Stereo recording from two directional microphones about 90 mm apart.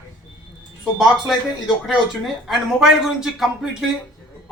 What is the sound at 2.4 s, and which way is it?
Speech, 5° right (ahead or behind).